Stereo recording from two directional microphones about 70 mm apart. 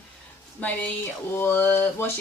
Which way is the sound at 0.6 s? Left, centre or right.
Left.